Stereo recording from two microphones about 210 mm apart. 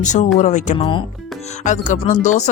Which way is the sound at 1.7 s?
35° left (ahead or behind).